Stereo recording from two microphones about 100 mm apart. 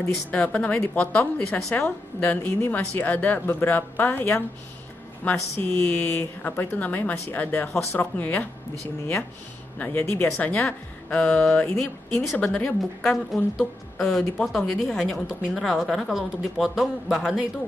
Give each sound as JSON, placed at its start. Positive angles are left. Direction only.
{"t": 0.3, "sound": "speech", "side_deg": 15}
{"t": 9.8, "sound": "speech", "side_deg": 15}
{"t": 13.1, "sound": "speech", "side_deg": 0}
{"t": 15.2, "sound": "speech", "side_deg": -5}